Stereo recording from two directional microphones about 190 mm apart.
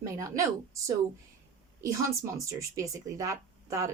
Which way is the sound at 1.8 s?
15° right (ahead or behind).